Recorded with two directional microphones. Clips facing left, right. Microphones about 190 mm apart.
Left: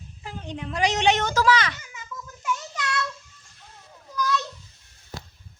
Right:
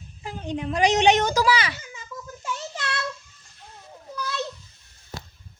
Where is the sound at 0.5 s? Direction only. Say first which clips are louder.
Right 4 dB; 15° right (ahead or behind).